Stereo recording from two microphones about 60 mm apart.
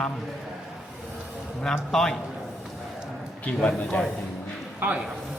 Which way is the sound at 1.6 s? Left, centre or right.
Centre.